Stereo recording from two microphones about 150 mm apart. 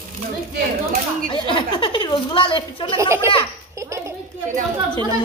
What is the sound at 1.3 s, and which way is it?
Speech, 35° left (ahead or behind).